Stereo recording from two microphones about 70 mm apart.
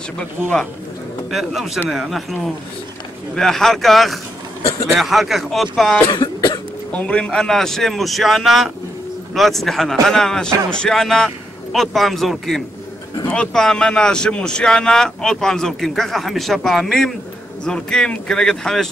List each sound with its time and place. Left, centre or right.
1.3 s a man's voice: centre
6.1 s cough: left
6.9 s a man's voice: centre